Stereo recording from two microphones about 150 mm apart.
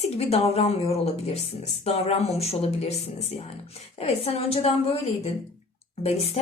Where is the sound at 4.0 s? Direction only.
45° left (ahead or behind).